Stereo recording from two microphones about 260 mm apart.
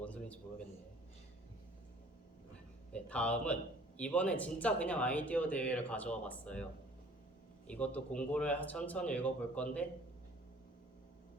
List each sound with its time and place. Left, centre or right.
0.0 s a sound: centre
2.9 s speech: centre
7.7 s speech: centre